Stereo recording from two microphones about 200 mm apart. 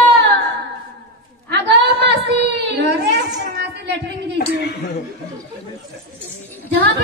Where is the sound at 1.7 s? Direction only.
55° right (ahead or behind).